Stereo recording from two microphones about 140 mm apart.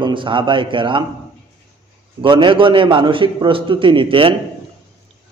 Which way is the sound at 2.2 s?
35° right (ahead or behind).